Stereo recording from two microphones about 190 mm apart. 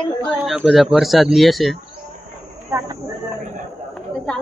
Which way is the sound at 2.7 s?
15° right (ahead or behind).